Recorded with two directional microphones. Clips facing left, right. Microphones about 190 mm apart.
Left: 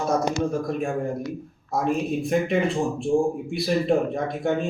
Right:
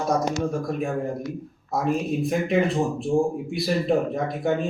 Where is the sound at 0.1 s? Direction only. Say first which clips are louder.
Even; centre (ahead or behind).